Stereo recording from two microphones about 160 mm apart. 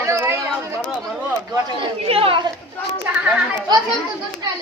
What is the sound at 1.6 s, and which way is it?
Speech, 35° right (ahead or behind).